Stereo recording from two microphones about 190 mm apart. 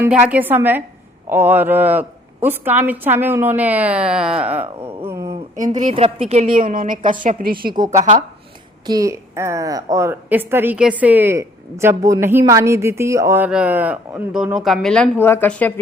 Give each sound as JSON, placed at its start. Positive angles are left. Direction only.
{"t": 0.0, "sound": "a woman's voice", "side_deg": -10}
{"t": 5.0, "sound": "a sound", "side_deg": -15}
{"t": 5.7, "sound": "speech", "side_deg": -30}
{"t": 6.6, "sound": "a woman's voice", "side_deg": -45}
{"t": 7.7, "sound": "a woman's voice", "side_deg": -20}
{"t": 7.9, "sound": "speech", "side_deg": -40}
{"t": 8.9, "sound": "a woman's voice", "side_deg": -15}